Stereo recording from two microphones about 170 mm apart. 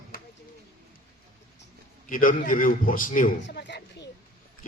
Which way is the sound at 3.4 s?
85° left.